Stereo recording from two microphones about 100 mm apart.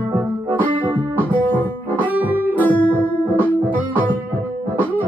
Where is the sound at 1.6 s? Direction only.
20° left (ahead or behind).